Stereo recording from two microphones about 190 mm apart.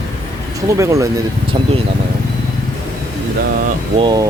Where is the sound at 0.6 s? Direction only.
15° right (ahead or behind).